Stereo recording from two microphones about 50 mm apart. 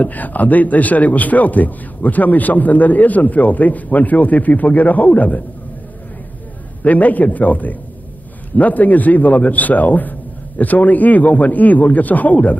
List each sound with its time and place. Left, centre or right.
0.0 s speech: left
6.8 s speech: left